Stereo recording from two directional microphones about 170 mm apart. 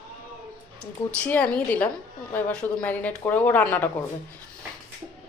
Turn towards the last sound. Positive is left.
turn(degrees=10)  # may be behind; listen again after turning